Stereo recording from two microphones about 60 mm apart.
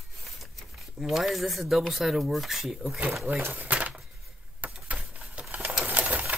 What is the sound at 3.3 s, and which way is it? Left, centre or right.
Speech, right.